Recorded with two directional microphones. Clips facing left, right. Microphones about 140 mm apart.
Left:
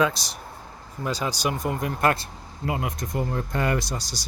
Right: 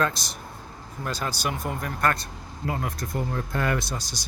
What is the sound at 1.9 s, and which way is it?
Speech, 30° left (ahead or behind).